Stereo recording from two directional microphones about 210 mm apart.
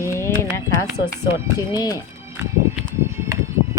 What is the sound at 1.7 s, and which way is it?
Speech, 20° left (ahead or behind).